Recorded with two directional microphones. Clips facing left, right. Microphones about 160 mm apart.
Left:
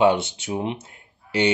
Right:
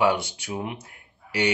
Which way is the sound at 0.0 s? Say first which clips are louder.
Left 4 dB; 25° left (ahead or behind).